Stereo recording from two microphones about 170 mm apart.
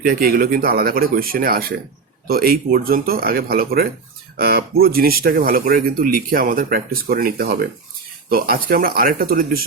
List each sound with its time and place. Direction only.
0.0 s speech: 60° right (ahead or behind)